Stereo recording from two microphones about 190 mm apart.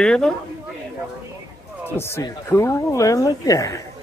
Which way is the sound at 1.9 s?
15° left (ahead or behind).